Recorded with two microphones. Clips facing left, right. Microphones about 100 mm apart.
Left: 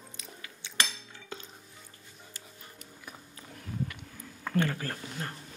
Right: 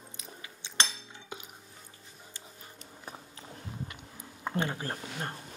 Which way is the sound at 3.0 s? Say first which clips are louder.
Right 3 dB; 30° right (ahead or behind).